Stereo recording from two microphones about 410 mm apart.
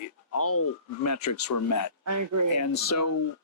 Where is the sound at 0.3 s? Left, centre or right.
Left.